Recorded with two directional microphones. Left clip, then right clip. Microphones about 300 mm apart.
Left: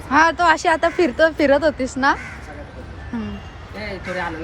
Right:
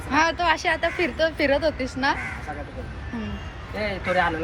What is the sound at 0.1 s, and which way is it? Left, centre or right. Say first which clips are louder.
Speech: left 6 dB; centre.